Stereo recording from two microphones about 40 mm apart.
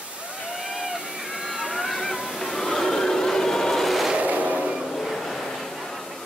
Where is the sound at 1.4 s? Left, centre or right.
Centre.